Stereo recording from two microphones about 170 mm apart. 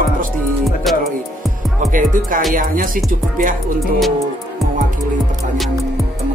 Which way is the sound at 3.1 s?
55° right (ahead or behind).